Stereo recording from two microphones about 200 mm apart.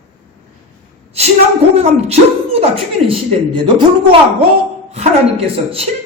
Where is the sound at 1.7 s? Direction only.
35° right (ahead or behind).